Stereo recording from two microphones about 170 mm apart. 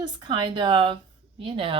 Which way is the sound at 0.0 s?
25° right (ahead or behind).